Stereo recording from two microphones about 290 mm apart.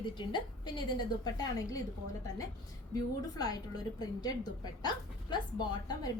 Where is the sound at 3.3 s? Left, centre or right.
Centre.